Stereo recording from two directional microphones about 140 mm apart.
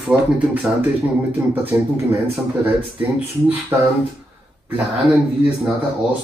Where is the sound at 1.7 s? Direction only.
20° right (ahead or behind).